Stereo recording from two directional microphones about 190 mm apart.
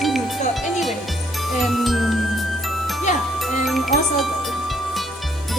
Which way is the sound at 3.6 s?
Centre (ahead or behind).